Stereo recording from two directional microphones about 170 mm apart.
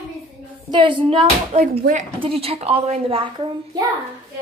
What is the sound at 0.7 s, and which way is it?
A woman's voice, 30° right (ahead or behind).